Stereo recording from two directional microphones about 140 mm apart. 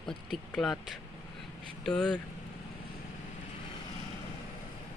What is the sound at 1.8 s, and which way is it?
Speech, 5° left (ahead or behind).